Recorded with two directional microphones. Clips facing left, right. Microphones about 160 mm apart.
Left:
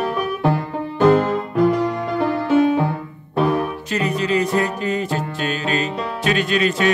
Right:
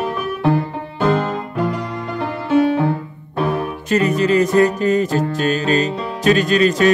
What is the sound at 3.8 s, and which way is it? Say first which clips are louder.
Music: right 9 dB; 45° right (ahead or behind).